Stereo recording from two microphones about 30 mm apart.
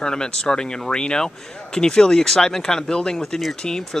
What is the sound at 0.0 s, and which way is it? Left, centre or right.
Speech, left.